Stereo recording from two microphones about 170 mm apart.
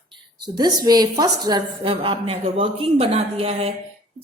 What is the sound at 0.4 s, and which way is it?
A woman's voice, 25° right (ahead or behind).